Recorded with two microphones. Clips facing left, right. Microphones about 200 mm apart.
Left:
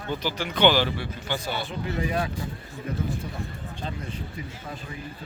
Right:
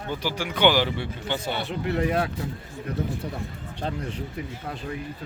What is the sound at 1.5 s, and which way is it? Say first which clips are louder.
Speech: right 3 dB; 65° right (ahead or behind).